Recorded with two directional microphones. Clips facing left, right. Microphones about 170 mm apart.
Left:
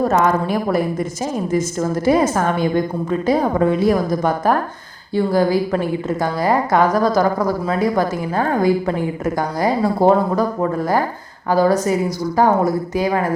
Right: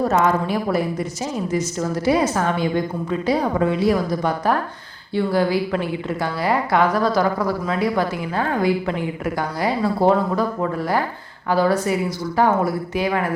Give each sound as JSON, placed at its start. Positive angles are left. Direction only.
{"t": 0.0, "sound": "a woman's voice", "side_deg": 50}